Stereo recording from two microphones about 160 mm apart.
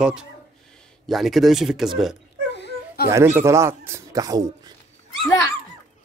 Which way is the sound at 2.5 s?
90° left.